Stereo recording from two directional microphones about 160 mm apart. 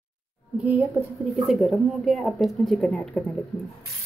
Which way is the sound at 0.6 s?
10° right (ahead or behind).